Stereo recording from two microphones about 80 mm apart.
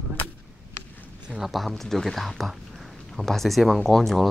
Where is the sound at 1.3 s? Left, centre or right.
Centre.